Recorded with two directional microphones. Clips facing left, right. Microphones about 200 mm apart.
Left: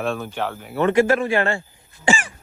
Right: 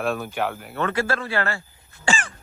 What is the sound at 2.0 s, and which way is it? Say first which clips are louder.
Cough: left 4 dB; 15° left (ahead or behind).